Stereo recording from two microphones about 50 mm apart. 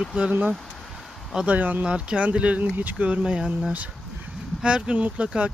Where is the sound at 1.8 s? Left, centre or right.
Right.